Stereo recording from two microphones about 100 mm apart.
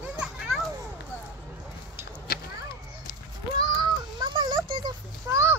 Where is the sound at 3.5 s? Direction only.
45° right (ahead or behind).